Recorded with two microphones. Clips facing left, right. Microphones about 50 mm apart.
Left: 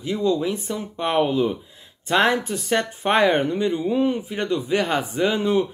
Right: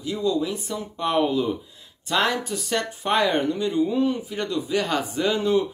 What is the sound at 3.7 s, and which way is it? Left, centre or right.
A man's voice, left.